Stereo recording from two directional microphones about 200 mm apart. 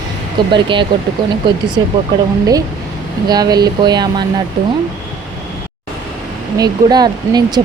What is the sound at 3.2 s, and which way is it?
Speech, 20° right (ahead or behind).